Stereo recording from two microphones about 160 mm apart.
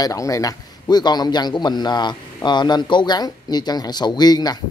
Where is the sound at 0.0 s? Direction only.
20° left (ahead or behind).